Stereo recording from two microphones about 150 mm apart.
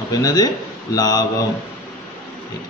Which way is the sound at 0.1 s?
25° left (ahead or behind).